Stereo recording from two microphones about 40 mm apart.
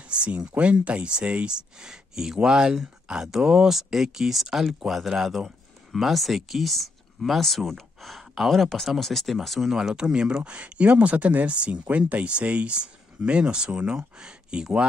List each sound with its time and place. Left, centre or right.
0.1 s speech: right
1.8 s speech: centre
9.7 s speech: centre